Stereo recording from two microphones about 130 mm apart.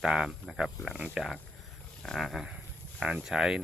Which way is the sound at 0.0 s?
5° right (ahead or behind).